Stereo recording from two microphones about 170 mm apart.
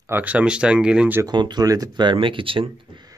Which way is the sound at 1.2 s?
25° right (ahead or behind).